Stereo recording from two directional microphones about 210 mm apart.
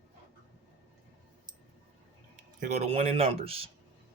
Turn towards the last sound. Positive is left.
turn(degrees=-30)  # may be behind; listen again after turning